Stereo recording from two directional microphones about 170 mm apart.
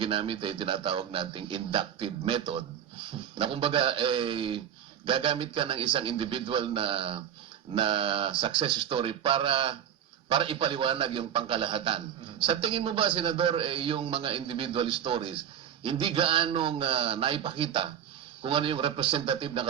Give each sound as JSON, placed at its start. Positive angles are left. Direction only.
{"t": 0.0, "sound": "a man's voice", "side_deg": -30}